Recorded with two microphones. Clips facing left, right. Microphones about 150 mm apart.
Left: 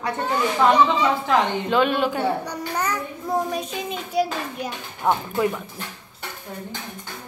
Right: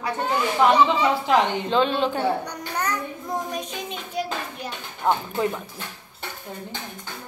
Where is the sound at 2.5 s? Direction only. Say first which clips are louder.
Left 2 dB; 5° left (ahead or behind).